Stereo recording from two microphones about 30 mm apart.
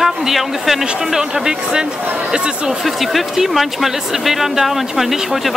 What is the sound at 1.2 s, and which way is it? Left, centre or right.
Speech, right.